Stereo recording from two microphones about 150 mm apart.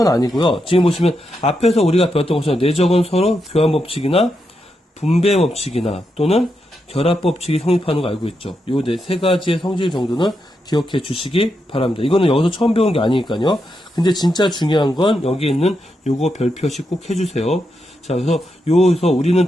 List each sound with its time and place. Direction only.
0.0 s speech: 25° left (ahead or behind); by 19.5 s 45° left (ahead or behind)